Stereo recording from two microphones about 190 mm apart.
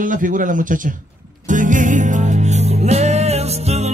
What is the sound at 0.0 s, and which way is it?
Speech, 45° right (ahead or behind).